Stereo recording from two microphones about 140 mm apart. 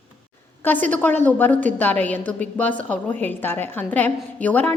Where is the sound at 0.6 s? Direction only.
10° left (ahead or behind).